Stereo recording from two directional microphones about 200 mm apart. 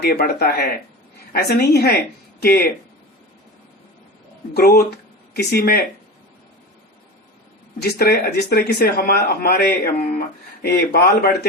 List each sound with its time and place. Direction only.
0.0 s speech: 50° left (ahead or behind)
4.5 s speech: 50° left (ahead or behind)
7.8 s speech: 50° left (ahead or behind)